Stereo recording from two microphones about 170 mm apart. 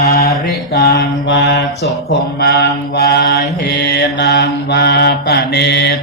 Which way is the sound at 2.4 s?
70° left (ahead or behind).